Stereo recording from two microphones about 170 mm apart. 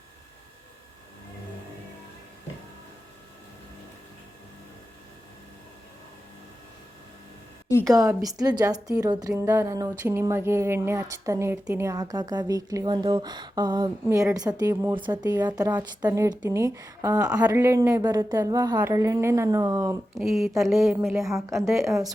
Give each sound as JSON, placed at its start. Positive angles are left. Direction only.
{"t": 7.9, "sound": "a woman's voice", "side_deg": -20}
{"t": 20.1, "sound": "a woman's voice", "side_deg": 0}
{"t": 21.6, "sound": "a woman's voice", "side_deg": -15}